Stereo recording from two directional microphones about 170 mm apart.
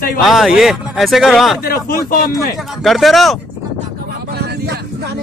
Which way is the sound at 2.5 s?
Centre (ahead or behind).